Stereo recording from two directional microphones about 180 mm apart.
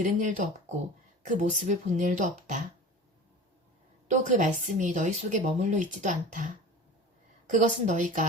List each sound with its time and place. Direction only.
0.0 s speech: 45° right (ahead or behind)
4.1 s speech: 40° right (ahead or behind)
7.5 s speech: 45° right (ahead or behind)